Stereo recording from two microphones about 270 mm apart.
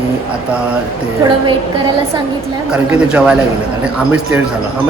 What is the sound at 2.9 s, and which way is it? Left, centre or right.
Speech, centre.